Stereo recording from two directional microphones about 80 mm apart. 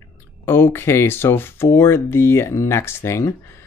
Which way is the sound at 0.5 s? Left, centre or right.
Left.